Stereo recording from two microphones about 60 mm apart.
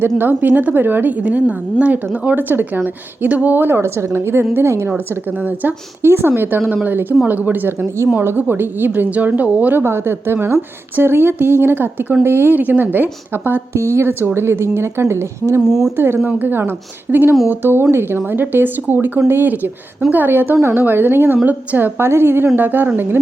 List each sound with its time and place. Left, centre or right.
0.2 s a woman's voice: right
5.4 s a woman's voice: right
9.8 s a woman's voice: right
13.7 s speech: right
15.6 s speech: centre
16.0 s a woman's voice: right